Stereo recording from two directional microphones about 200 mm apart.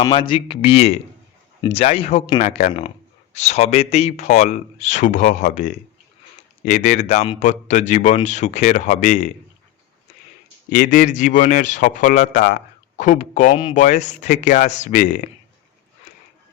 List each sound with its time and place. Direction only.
0.0 s speech: 25° left (ahead or behind)
2.4 s a man's voice: 35° left (ahead or behind)
6.7 s a man's voice: 40° left (ahead or behind)
10.7 s a man's voice: 40° left (ahead or behind)